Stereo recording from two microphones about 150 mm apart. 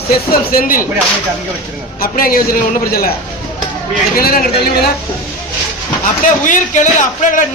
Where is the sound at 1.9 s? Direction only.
75° left (ahead or behind).